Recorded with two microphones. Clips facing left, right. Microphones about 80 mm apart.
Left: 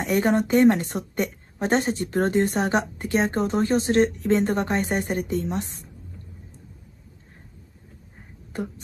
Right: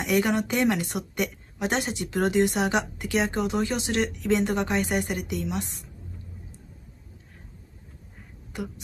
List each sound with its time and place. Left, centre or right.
0.0 s a woman's voice: left
8.5 s speech: left